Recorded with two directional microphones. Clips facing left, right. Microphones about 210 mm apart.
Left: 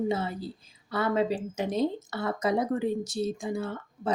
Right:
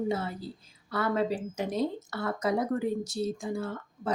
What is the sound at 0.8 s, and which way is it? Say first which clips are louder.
A woman's voice: left 2 dB; 20° left (ahead or behind).